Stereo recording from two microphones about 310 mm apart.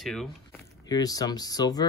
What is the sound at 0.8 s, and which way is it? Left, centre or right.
Speech, centre.